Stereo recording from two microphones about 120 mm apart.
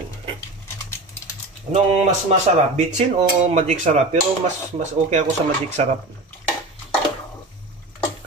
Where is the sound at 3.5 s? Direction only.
70° right (ahead or behind).